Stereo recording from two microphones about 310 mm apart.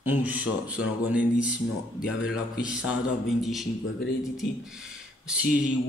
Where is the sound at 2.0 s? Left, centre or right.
Left.